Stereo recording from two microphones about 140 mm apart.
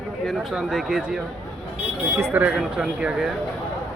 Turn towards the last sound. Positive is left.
turn(degrees=-5)  # may be behind; listen again after turning